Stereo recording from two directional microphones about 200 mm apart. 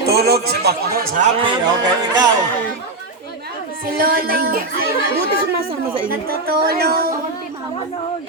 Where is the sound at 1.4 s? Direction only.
20° right (ahead or behind).